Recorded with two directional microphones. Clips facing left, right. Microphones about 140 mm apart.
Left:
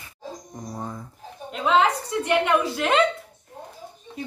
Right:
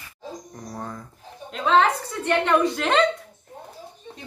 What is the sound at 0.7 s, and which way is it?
A woman's voice, 15° left (ahead or behind).